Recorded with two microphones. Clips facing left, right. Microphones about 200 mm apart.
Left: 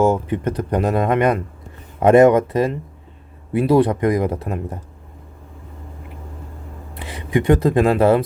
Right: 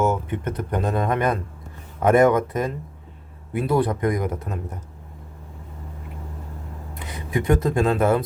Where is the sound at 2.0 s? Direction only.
25° left (ahead or behind).